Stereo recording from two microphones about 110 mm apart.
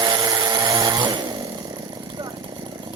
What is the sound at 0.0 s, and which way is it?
Chainsaw, 35° right (ahead or behind).